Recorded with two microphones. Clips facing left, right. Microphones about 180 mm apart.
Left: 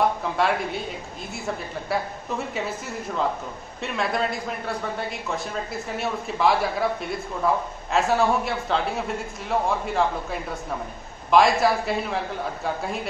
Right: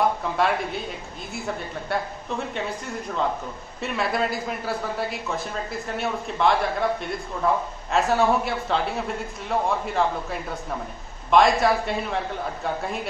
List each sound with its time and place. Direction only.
0.2 s a man's voice: centre (ahead or behind)
3.8 s a man's voice: centre (ahead or behind)